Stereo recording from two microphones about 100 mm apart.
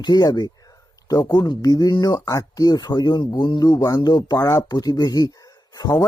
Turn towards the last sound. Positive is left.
turn(degrees=35)  # may be behind; listen again after turning